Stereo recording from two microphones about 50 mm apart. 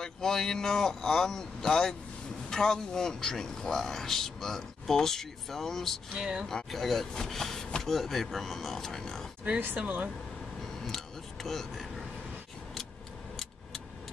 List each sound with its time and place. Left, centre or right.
0.0 s a man's voice: centre
6.1 s speech: centre
6.4 s speech: centre
9.8 s speech: right
11.4 s speech: centre